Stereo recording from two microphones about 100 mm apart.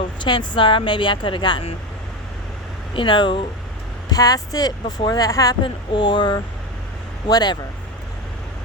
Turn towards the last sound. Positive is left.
turn(degrees=45)  # may be behind; listen again after turning